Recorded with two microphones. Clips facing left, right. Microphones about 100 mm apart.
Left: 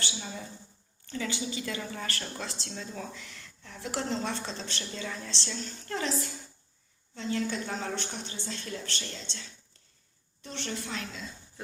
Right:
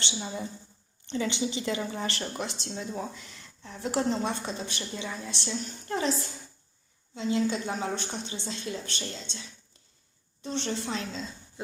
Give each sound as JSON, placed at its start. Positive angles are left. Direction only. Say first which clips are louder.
{"t": 0.0, "sound": "a sound", "louder": "right 4 dB", "side_deg": -25}
{"t": 1.0, "sound": "a woman's voice", "louder": "right 5 dB", "side_deg": -20}
{"t": 7.1, "sound": "a woman's voice", "louder": "right 4 dB", "side_deg": -15}